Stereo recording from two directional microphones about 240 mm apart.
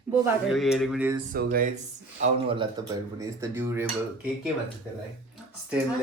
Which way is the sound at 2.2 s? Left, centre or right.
Right.